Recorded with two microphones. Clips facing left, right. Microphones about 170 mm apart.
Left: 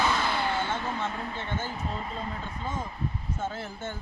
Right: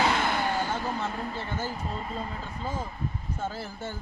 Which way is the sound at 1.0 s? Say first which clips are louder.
Right 1 dB; 5° right (ahead or behind).